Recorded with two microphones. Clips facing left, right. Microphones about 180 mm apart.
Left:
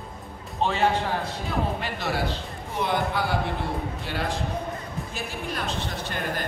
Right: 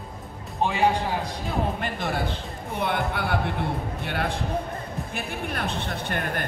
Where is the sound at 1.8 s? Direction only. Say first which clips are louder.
Even; 50° right (ahead or behind).